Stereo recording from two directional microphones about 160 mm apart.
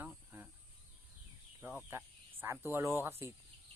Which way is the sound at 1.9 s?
15° right (ahead or behind).